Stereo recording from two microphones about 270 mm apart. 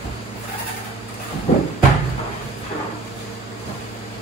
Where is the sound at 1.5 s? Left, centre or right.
Left.